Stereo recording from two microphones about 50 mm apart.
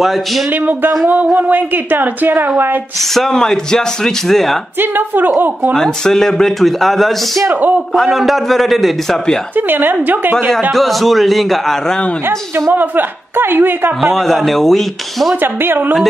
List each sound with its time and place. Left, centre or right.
0.5 s a woman's voice: right
3.2 s speech: centre
4.7 s a woman's voice: right
5.8 s a man's voice: centre
9.6 s a woman's voice: right
10.7 s a man's voice: centre
12.3 s a woman's voice: right
12.7 s a woman's voice: right
14.1 s a man's voice: centre
15.4 s a woman's voice: right